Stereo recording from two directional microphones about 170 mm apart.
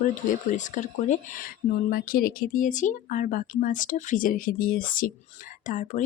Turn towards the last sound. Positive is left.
turn(degrees=50)  # may be behind; listen again after turning